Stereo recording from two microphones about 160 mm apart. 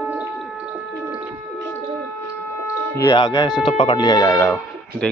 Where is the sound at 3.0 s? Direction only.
25° left (ahead or behind).